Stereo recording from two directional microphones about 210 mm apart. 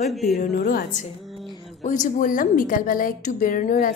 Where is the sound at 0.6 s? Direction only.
45° left (ahead or behind).